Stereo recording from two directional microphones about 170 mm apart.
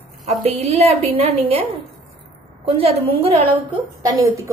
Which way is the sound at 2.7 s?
35° right (ahead or behind).